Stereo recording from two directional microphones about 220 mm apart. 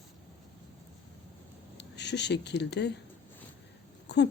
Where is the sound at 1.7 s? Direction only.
50° left (ahead or behind).